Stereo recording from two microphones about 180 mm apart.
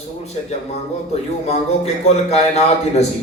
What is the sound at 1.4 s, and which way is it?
Speech, 35° left (ahead or behind).